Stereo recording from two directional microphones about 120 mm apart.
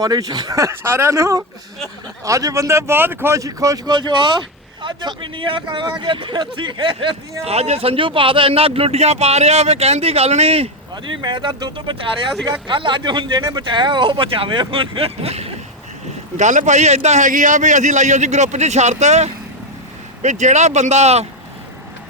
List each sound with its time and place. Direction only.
0.0 s speech: 35° right (ahead or behind)
7.4 s speech: 60° right (ahead or behind)
10.9 s speech: 40° right (ahead or behind); by 15.5 s 60° right (ahead or behind)
16.4 s a man's voice: 90° right; by 19.3 s 70° right (ahead or behind)
20.2 s a man's voice: 80° right; by 21.2 s 65° right (ahead or behind)